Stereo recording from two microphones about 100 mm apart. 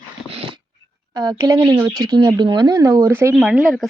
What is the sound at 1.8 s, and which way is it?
Speech, centre (ahead or behind).